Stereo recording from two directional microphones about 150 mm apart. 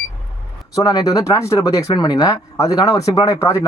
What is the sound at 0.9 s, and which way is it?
Speech, 25° left (ahead or behind).